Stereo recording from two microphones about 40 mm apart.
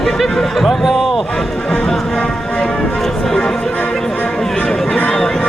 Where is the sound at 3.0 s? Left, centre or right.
Centre.